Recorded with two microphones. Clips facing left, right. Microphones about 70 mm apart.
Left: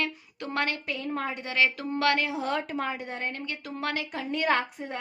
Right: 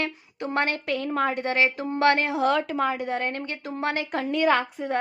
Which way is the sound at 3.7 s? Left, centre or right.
Right.